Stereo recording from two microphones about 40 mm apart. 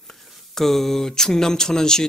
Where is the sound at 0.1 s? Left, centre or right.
Centre.